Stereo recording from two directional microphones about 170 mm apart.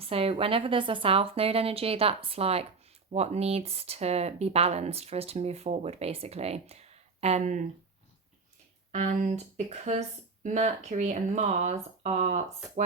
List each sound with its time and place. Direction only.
0.0 s speech: 35° right (ahead or behind)
8.9 s speech: 45° right (ahead or behind)